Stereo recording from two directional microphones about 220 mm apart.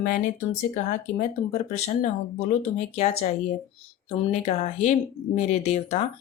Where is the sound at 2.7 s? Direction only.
30° left (ahead or behind).